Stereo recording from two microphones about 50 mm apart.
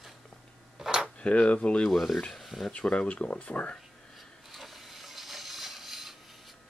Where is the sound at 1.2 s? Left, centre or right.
Left.